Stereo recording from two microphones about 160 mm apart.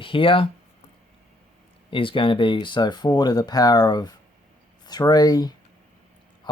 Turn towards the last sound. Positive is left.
turn(degrees=25)  # may be behind; listen again after turning